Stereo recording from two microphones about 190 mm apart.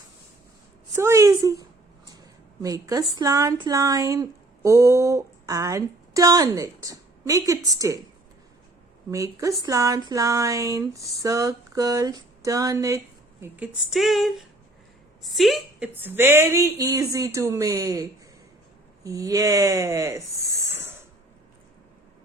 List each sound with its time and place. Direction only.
0.9 s a woman's voice: 15° right (ahead or behind)
9.0 s speech: 15° right (ahead or behind)
13.4 s a woman's voice: 5° right (ahead or behind)
16.0 s speech: 10° right (ahead or behind)
19.0 s speech: 20° right (ahead or behind)